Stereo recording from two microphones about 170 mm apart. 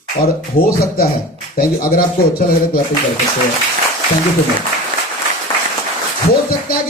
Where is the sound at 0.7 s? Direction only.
65° left (ahead or behind).